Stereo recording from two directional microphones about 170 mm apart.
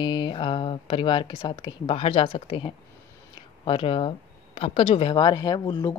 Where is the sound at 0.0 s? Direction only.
25° left (ahead or behind).